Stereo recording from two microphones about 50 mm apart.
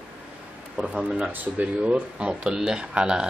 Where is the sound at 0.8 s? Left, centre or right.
Right.